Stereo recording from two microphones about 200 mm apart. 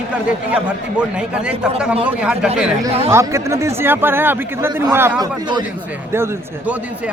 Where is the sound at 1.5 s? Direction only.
5° right (ahead or behind).